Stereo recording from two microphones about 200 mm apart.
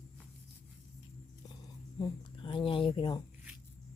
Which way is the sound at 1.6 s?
20° left (ahead or behind).